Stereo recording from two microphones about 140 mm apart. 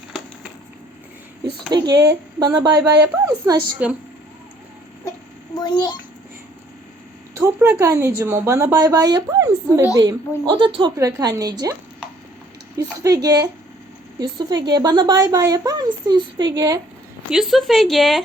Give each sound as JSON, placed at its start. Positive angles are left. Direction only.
{"t": 1.7, "sound": "a woman's voice", "side_deg": -30}
{"t": 2.6, "sound": "a woman's voice", "side_deg": -15}
{"t": 3.8, "sound": "a woman's voice", "side_deg": -10}
{"t": 5.5, "sound": "a child's voice", "side_deg": 30}
{"t": 7.3, "sound": "a woman's voice", "side_deg": -20}
{"t": 10.9, "sound": "a woman's voice", "side_deg": -25}
{"t": 17.3, "sound": "speech", "side_deg": 0}